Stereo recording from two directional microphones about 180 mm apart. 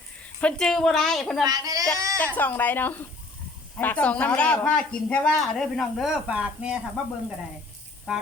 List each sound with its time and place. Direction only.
0.3 s speech: 5° left (ahead or behind)
1.5 s speech: 20° right (ahead or behind)
2.1 s speech: 10° left (ahead or behind); by 8.2 s 5° right (ahead or behind)